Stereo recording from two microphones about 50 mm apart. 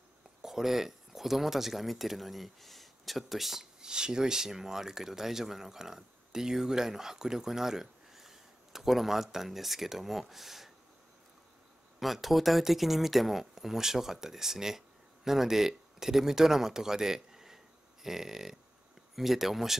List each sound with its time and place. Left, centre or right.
0.4 s speech: centre
12.0 s speech: centre